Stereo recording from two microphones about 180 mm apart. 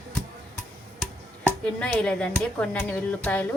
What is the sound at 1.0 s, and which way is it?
Speech, 5° left (ahead or behind).